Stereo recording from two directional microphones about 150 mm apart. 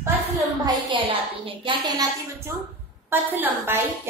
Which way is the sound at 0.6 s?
35° right (ahead or behind).